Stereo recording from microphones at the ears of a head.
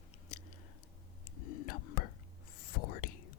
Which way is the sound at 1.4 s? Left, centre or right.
Left.